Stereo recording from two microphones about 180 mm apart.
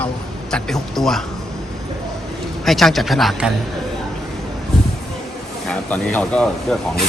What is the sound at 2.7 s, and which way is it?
Speech, centre (ahead or behind).